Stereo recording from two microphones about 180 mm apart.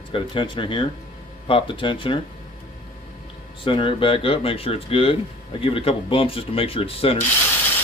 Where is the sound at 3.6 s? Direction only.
30° left (ahead or behind).